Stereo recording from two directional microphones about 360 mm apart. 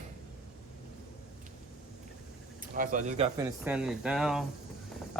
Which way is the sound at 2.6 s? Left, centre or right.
Right.